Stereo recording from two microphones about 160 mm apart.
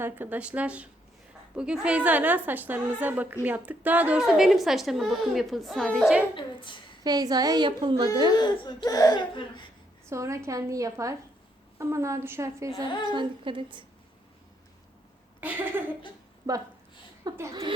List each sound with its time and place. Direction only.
0.0 s a woman's voice: 10° right (ahead or behind)
6.3 s a woman's voice: 30° left (ahead or behind)
7.0 s a woman's voice: 25° right (ahead or behind)
8.4 s speech: 25° left (ahead or behind)
10.1 s a woman's voice: 20° right (ahead or behind)
12.7 s speech: 30° left (ahead or behind)
13.1 s a woman's voice: 30° right (ahead or behind)
15.4 s a woman's voice: 10° right (ahead or behind)
17.2 s a woman's voice: 20° right (ahead or behind)